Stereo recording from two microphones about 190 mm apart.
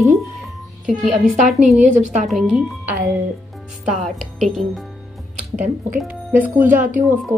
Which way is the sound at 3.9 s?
Centre (ahead or behind).